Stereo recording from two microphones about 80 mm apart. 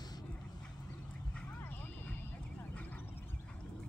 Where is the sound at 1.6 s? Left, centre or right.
Left.